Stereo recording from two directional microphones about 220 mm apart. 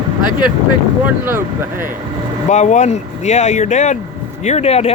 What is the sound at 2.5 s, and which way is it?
Speech, 30° left (ahead or behind).